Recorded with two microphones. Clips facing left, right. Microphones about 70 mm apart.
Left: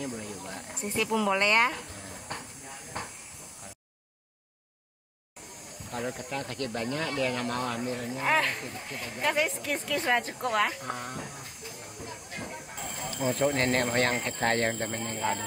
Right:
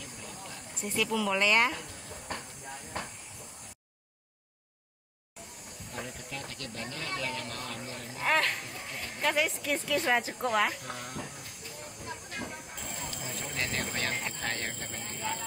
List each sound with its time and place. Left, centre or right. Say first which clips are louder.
0.0 s a sound: left 8 dB; left
0.9 s speech: left 3 dB; centre
5.9 s speech: left 7 dB; left
6.4 s speech: left 8 dB; left
8.2 s speech: left 1 dB; centre
12.0 s a sound: even; centre
13.2 s speech: left 13 dB; left